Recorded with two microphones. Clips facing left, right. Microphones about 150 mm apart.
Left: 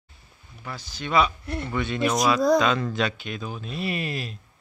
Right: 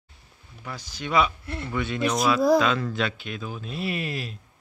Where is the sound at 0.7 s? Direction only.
15° right (ahead or behind).